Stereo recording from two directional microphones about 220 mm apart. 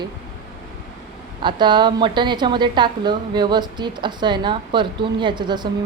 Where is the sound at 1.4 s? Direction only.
20° right (ahead or behind).